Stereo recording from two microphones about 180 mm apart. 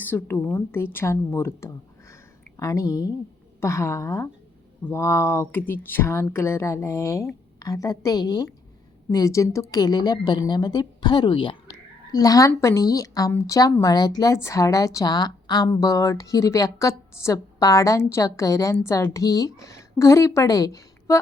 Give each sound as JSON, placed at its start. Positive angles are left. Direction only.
{"t": 0.0, "sound": "a woman's voice", "side_deg": 10}